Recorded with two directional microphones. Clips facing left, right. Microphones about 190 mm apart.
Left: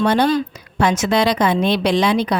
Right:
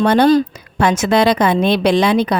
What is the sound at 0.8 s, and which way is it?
A woman's voice, 55° right (ahead or behind).